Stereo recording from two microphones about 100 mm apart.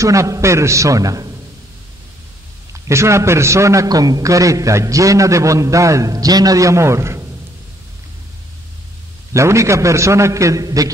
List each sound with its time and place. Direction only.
0.0 s a man's voice: 30° right (ahead or behind)
2.7 s a man's voice: 30° right (ahead or behind)
9.3 s a man's voice: 30° right (ahead or behind)